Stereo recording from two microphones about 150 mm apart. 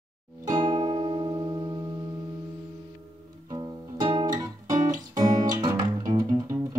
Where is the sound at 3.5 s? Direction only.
30° right (ahead or behind).